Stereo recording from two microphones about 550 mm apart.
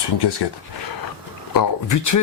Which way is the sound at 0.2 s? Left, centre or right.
Left.